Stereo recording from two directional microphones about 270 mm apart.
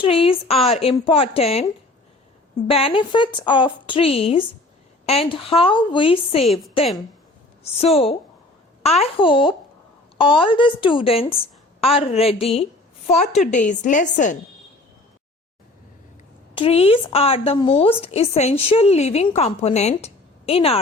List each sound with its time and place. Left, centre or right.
0.0 s speech: centre
2.6 s speech: centre
6.4 s a woman's voice: centre
7.6 s speech: left
16.6 s speech: left